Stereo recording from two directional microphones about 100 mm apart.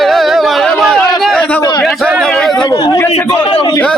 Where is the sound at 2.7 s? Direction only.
35° left (ahead or behind).